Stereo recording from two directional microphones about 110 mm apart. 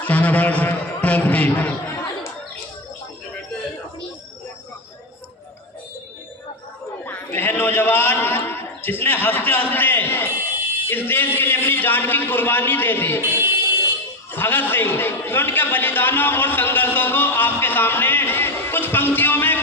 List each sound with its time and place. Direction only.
0.0 s a man's voice: 15° left (ahead or behind)
7.0 s a sound: 15° left (ahead or behind)
10.8 s a man's voice: 20° left (ahead or behind)
13.2 s music: 20° right (ahead or behind)
14.3 s a man's voice: 20° left (ahead or behind)